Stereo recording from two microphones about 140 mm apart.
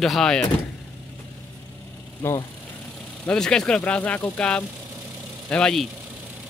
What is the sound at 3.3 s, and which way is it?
Speech, 5° left (ahead or behind).